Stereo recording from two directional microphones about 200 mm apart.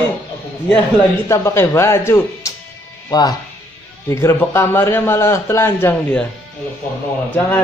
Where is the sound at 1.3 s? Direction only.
15° left (ahead or behind).